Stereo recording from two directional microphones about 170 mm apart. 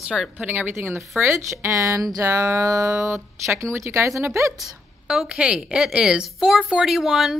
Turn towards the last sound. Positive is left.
turn(degrees=0)  # may be behind; listen again after turning